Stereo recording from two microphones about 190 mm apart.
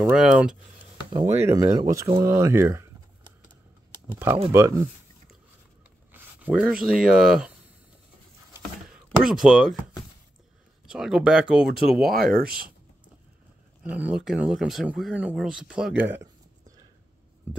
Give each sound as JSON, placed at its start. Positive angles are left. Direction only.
{"t": 0.0, "sound": "speech", "side_deg": -5}
{"t": 1.1, "sound": "speech", "side_deg": -15}
{"t": 2.2, "sound": "a sound", "side_deg": -15}
{"t": 4.5, "sound": "speech", "side_deg": -15}
{"t": 6.1, "sound": "a sound", "side_deg": -5}
{"t": 6.8, "sound": "speech", "side_deg": -5}
{"t": 9.2, "sound": "speech", "side_deg": -5}
{"t": 10.9, "sound": "speech", "side_deg": -5}
{"t": 12.1, "sound": "speech", "side_deg": -50}
{"t": 13.8, "sound": "speech", "side_deg": -5}